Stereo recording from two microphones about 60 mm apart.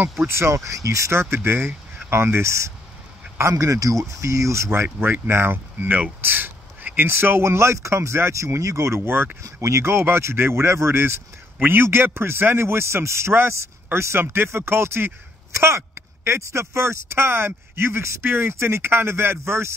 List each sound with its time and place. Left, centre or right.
0.3 s speech: right
0.7 s speech: right
1.3 s speech: right
3.5 s speech: right
5.3 s speech: right
6.2 s a sound: right
7.1 s speech: right
9.4 s a man's voice: right